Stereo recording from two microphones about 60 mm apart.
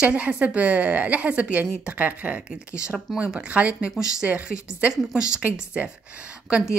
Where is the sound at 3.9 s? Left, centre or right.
Centre.